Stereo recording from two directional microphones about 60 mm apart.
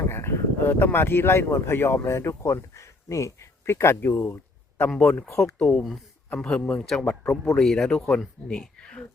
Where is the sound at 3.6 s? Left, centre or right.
Left.